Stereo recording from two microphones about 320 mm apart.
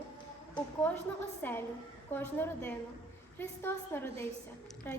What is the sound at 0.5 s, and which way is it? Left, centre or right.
A woman's voice, centre.